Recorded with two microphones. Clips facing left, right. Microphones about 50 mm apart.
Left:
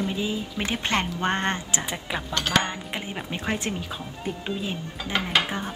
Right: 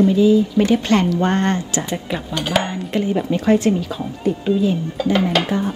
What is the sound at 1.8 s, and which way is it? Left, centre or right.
Speech, centre.